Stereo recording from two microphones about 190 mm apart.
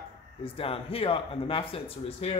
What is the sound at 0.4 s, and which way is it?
A man's voice, 30° left (ahead or behind).